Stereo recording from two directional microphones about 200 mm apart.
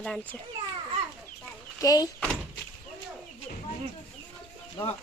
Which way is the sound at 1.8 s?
20° left (ahead or behind).